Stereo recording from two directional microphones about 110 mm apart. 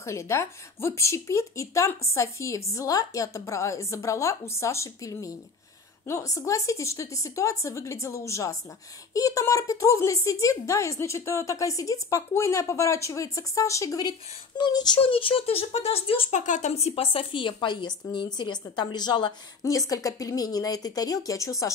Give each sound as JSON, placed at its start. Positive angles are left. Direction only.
{"t": 0.0, "sound": "speech", "side_deg": 25}
{"t": 15.0, "sound": "speech", "side_deg": 55}
{"t": 19.6, "sound": "speech", "side_deg": 30}